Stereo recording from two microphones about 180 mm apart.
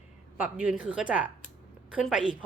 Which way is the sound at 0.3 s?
10° right (ahead or behind).